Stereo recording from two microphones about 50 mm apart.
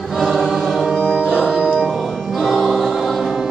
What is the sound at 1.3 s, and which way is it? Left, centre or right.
Music, centre.